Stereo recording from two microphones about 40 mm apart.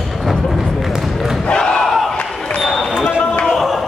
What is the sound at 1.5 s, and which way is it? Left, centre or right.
Crowd, centre.